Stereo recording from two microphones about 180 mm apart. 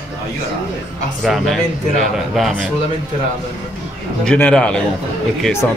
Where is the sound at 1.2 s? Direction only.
Centre (ahead or behind).